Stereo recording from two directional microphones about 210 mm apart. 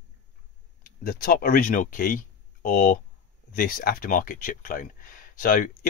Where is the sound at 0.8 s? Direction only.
45° left (ahead or behind).